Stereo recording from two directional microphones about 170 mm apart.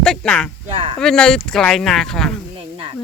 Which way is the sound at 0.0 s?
5° left (ahead or behind).